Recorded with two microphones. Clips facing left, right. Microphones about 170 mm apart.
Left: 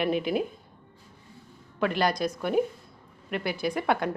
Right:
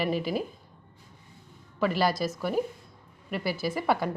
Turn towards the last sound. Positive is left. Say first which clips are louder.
# left 1 dB
turn(degrees=-5)  # may be behind; listen again after turning